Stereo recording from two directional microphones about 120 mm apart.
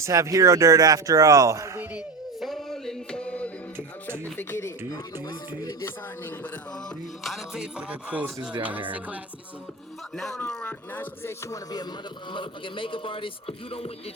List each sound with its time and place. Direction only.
0.0 s speech: 25° right (ahead or behind)
2.4 s a sound: centre (ahead or behind)
4.4 s speech: 20° left (ahead or behind)
7.3 s music: 5° right (ahead or behind)
10.2 s music: 5° left (ahead or behind); by 11.6 s 20° left (ahead or behind)
12.3 s speech: 45° left (ahead or behind)